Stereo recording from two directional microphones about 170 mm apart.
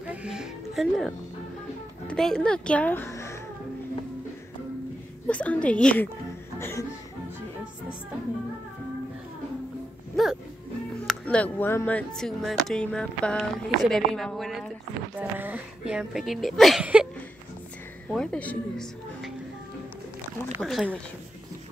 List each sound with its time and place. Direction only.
0.0 s music: 5° right (ahead or behind)
2.0 s speech: 5° left (ahead or behind)
5.3 s a woman's voice: 10° left (ahead or behind)
10.2 s speech: centre (ahead or behind)
15.1 s speech: 10° right (ahead or behind); by 19.3 s 5° left (ahead or behind)
20.6 s speech: 5° right (ahead or behind)